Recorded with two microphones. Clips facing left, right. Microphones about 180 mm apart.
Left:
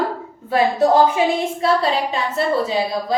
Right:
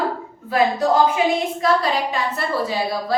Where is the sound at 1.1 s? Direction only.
30° left (ahead or behind).